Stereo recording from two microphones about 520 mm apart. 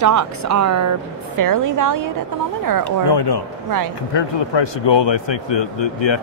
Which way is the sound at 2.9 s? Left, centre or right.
Left.